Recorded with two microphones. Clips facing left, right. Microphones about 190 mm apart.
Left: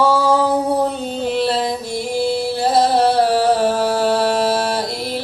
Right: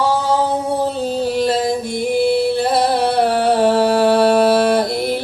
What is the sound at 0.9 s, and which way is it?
Music, 35° right (ahead or behind).